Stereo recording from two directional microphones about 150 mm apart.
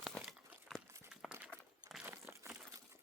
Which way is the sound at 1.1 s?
5° right (ahead or behind).